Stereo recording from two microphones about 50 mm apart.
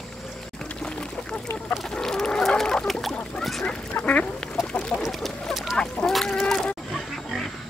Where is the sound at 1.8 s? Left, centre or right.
Centre.